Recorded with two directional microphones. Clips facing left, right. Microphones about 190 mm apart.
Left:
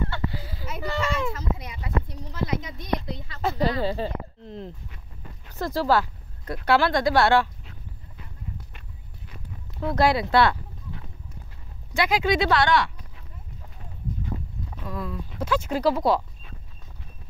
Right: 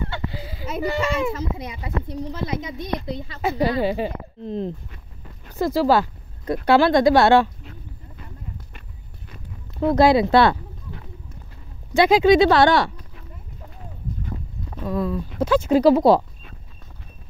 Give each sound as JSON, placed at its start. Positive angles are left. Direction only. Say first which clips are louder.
{"t": 0.1, "sound": "a sound", "louder": "right 1 dB", "side_deg": -20}
{"t": 0.8, "sound": "speech", "louder": "right 4 dB", "side_deg": -15}
{"t": 3.3, "sound": "speech", "louder": "right 3 dB", "side_deg": -10}
{"t": 5.6, "sound": "speech", "louder": "right 5 dB", "side_deg": -10}
{"t": 9.9, "sound": "speech", "louder": "right 5 dB", "side_deg": -20}
{"t": 11.9, "sound": "speech", "louder": "right 9 dB", "side_deg": -25}
{"t": 14.8, "sound": "speech", "louder": "right 9 dB", "side_deg": -35}
{"t": 15.4, "sound": "speech", "louder": "right 8 dB", "side_deg": -25}